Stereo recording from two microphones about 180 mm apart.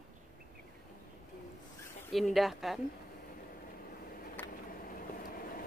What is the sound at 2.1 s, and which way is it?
Speech, centre (ahead or behind).